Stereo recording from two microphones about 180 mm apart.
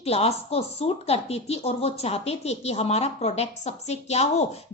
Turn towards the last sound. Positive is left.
turn(degrees=35)  # may be behind; listen again after turning